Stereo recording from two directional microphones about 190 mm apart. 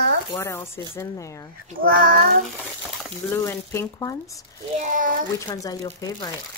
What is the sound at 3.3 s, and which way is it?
Speech, 15° left (ahead or behind).